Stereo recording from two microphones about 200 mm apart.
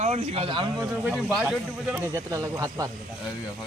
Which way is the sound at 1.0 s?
5° right (ahead or behind).